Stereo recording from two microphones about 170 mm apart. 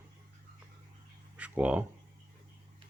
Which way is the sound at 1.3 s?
10° right (ahead or behind).